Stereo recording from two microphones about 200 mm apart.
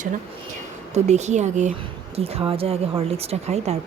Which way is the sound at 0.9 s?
35° right (ahead or behind).